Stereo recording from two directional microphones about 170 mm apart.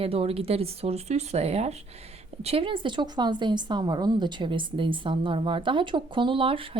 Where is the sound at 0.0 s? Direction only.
35° right (ahead or behind).